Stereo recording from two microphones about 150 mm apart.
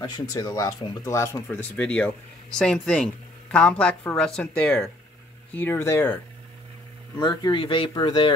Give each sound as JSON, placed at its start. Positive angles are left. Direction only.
{"t": 0.0, "sound": "speech", "side_deg": 25}
{"t": 7.2, "sound": "speech", "side_deg": 30}